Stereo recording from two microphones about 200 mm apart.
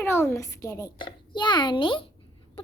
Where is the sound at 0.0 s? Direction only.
10° left (ahead or behind).